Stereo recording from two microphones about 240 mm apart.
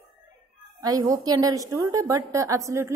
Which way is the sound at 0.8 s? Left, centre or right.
Centre.